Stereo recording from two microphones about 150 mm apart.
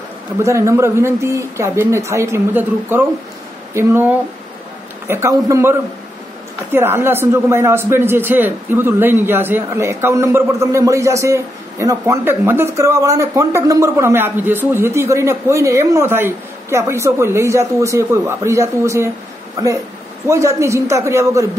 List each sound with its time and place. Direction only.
0.4 s speech: 20° right (ahead or behind)
20.2 s a man's voice: 20° right (ahead or behind)